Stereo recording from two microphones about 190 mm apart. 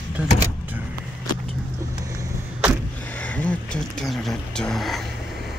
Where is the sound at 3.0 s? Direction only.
10° left (ahead or behind).